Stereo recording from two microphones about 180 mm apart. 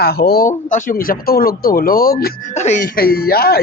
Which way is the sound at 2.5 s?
40° left (ahead or behind).